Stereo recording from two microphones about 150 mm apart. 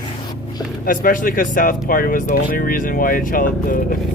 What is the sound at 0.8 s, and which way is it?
Speech, 70° left (ahead or behind).